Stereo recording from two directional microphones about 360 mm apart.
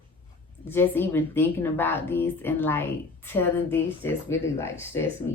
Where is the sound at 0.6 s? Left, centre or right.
Centre.